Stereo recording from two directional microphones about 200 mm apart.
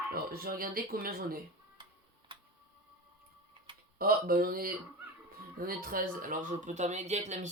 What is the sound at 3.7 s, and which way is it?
Typing, 25° right (ahead or behind).